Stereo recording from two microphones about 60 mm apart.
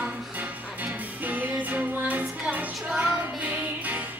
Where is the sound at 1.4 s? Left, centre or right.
Right.